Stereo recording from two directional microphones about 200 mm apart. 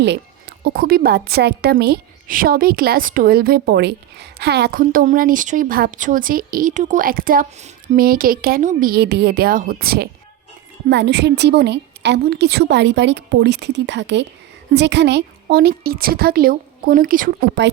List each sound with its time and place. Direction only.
0.6 s a woman's voice: 50° right (ahead or behind)